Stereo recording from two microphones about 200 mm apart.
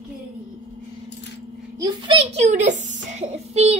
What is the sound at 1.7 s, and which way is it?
A child's voice, 20° right (ahead or behind).